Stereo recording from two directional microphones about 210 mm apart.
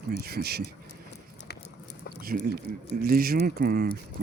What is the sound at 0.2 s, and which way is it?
Speech, 50° right (ahead or behind).